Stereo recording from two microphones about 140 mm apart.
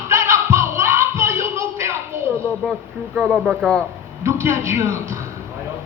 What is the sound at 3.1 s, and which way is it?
Speech, 5° right (ahead or behind).